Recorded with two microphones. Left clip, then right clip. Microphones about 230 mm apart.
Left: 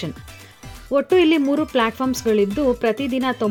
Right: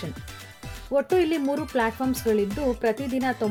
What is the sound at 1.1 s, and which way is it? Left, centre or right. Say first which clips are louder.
Speech: left 10 dB; left.